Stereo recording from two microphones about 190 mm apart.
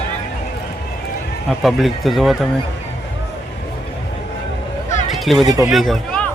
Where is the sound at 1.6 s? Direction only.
Centre (ahead or behind).